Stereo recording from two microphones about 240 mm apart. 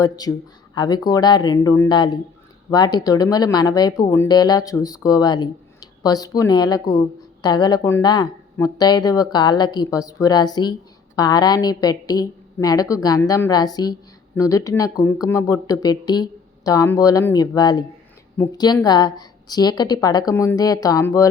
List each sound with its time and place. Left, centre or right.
0.0 s speech: centre